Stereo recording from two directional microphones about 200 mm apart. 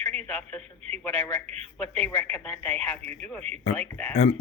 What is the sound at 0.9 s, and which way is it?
Speech, 30° right (ahead or behind).